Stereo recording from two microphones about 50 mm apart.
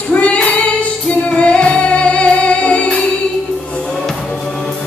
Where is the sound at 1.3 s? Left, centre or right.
Left.